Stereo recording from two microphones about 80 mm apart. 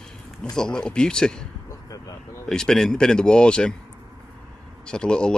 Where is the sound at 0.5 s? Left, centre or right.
Centre.